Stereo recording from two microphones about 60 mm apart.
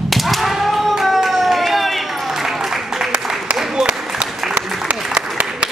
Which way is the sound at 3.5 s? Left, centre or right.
Centre.